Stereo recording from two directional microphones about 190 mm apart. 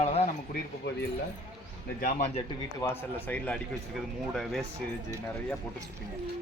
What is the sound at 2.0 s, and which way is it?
Speech, 50° left (ahead or behind).